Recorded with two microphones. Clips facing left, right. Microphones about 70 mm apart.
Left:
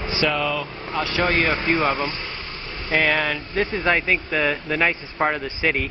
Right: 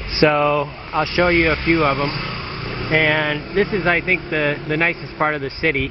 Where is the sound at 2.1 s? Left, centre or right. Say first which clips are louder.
Right 5 dB; right.